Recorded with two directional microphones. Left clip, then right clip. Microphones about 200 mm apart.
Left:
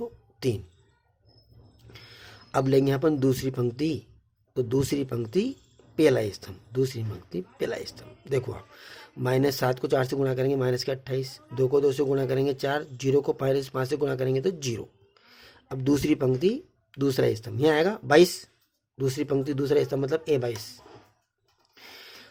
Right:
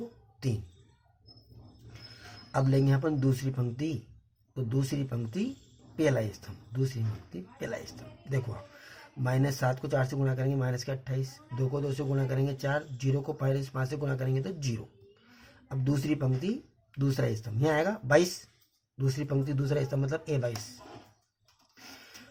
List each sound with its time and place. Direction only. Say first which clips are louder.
0.3 s speech: left 9 dB; 45° left (ahead or behind)
1.9 s speech: left 3 dB; 45° left (ahead or behind)